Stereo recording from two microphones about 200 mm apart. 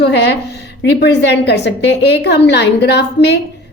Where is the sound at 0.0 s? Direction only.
55° left (ahead or behind).